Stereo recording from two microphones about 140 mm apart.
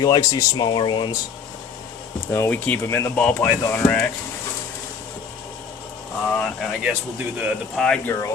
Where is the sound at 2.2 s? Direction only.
20° left (ahead or behind).